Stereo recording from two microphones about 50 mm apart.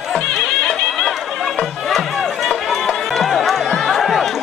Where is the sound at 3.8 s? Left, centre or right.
Centre.